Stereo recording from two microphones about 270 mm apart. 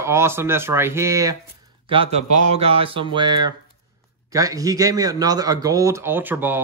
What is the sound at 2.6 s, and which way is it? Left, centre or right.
A man's voice, right.